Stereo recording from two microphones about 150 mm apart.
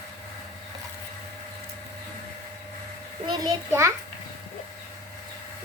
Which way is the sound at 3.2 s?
30° right (ahead or behind).